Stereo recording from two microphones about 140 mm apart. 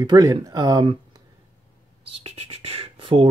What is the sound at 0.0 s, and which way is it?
Speech, 25° right (ahead or behind).